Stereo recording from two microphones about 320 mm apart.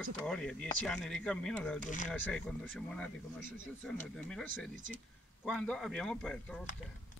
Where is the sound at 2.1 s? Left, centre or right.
Centre.